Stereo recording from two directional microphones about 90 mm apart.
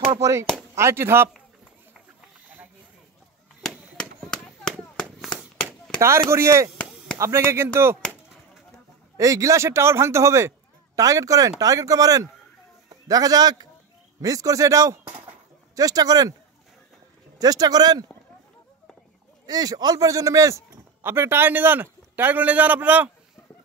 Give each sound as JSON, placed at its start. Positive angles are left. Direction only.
{"t": 0.2, "sound": "a man's voice", "side_deg": -35}
{"t": 3.9, "sound": "a sound", "side_deg": 5}
{"t": 5.9, "sound": "a man's voice", "side_deg": -30}
{"t": 9.1, "sound": "a man's voice", "side_deg": -35}
{"t": 17.4, "sound": "speech", "side_deg": -45}
{"t": 19.4, "sound": "speech", "side_deg": -45}
{"t": 21.0, "sound": "a man's voice", "side_deg": -25}